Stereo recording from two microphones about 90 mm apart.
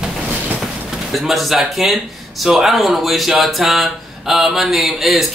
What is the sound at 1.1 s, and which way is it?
Speech, centre (ahead or behind).